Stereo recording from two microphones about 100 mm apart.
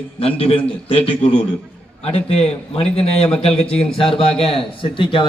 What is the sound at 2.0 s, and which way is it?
Speech, 90° left.